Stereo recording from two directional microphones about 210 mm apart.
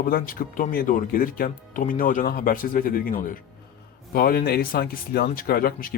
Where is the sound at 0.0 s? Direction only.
45° left (ahead or behind).